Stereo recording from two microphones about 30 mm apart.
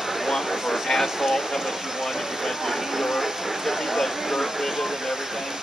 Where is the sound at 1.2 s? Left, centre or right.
Centre.